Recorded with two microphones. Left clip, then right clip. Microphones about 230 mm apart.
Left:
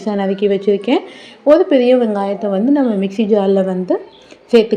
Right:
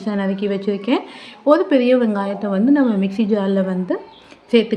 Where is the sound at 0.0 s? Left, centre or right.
Centre.